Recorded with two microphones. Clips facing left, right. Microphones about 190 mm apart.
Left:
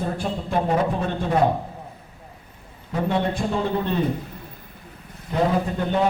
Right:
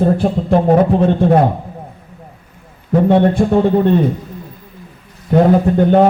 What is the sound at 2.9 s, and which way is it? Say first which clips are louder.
A man's voice: right 12 dB; 55° right (ahead or behind).